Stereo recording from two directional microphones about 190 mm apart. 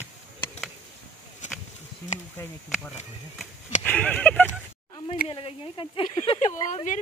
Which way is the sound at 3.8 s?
10° left (ahead or behind).